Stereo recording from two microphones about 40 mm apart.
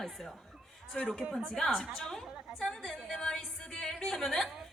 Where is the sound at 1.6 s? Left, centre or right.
Centre.